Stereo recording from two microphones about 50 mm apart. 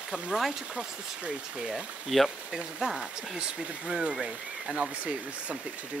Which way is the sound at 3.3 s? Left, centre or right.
Centre.